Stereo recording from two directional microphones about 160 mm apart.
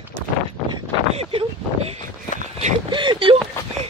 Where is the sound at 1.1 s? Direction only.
40° right (ahead or behind).